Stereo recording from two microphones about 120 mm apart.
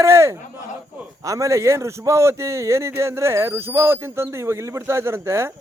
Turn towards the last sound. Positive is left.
turn(degrees=-20)  # may be behind; listen again after turning